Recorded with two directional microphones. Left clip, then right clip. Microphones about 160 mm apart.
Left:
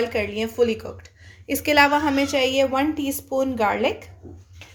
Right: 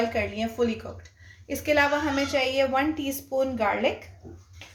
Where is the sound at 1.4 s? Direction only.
65° left (ahead or behind); by 3.9 s 50° left (ahead or behind).